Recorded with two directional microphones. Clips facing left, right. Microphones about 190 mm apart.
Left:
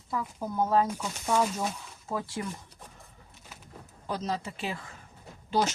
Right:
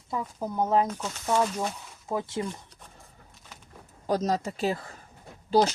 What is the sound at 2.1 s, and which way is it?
Speech, 20° right (ahead or behind).